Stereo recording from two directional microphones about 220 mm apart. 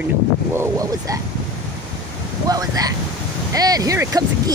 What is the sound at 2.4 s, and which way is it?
Speech, 15° right (ahead or behind).